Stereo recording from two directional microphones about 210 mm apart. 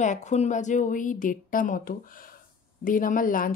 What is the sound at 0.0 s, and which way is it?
Speech, 35° left (ahead or behind).